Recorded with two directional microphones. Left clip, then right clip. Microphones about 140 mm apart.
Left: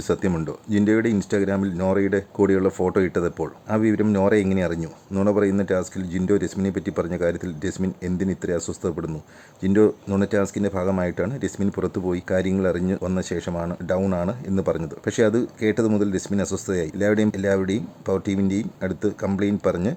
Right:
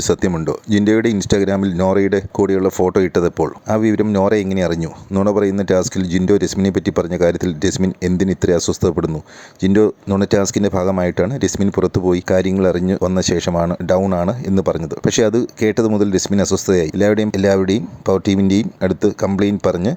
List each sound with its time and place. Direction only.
0.1 s speech: 55° right (ahead or behind)
13.5 s speech: 30° right (ahead or behind)
14.1 s speech: 45° right (ahead or behind)